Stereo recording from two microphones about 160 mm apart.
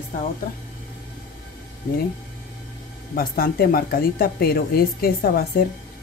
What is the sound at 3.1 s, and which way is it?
A woman's voice, 70° left (ahead or behind).